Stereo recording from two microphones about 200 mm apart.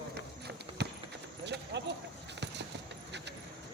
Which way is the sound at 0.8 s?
60° right (ahead or behind).